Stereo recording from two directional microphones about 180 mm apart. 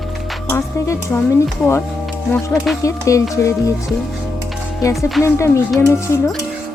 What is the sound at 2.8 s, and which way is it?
Speech, 15° left (ahead or behind).